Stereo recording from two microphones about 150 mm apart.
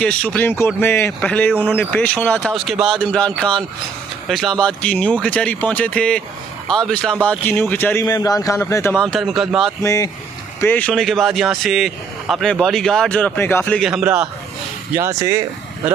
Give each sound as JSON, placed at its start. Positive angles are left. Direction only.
{"t": 0.0, "sound": "speech", "side_deg": 10}
{"t": 8.0, "sound": "speech", "side_deg": 25}
{"t": 9.8, "sound": "speech", "side_deg": 25}
{"t": 10.6, "sound": "speech", "side_deg": 10}
{"t": 13.8, "sound": "speech", "side_deg": -5}
{"t": 14.9, "sound": "speech", "side_deg": -20}